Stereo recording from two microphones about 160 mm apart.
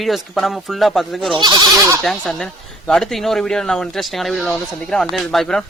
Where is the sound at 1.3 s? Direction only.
25° right (ahead or behind).